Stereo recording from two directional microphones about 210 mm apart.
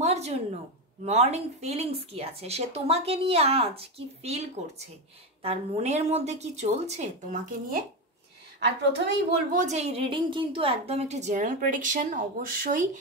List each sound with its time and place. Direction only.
0.0 s a sound: 30° right (ahead or behind)
1.0 s a woman's voice: 30° right (ahead or behind)
8.6 s a woman's voice: 55° right (ahead or behind)
9.5 s a woman's voice: 35° right (ahead or behind)